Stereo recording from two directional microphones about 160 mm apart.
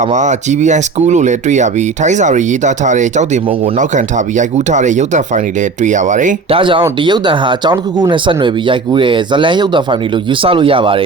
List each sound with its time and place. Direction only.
0.0 s speech: 45° right (ahead or behind)
6.5 s speech: 30° right (ahead or behind)